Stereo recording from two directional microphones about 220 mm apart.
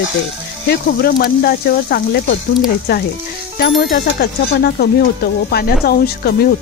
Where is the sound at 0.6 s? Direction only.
45° left (ahead or behind).